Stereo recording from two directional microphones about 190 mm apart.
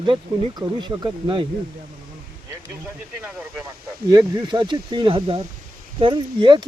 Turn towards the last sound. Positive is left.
turn(degrees=-25)  # may be behind; listen again after turning